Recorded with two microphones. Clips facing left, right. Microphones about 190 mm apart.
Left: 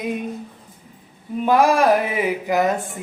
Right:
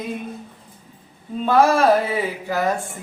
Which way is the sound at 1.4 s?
15° left (ahead or behind).